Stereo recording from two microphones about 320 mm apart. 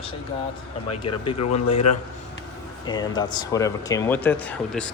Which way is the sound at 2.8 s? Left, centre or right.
Centre.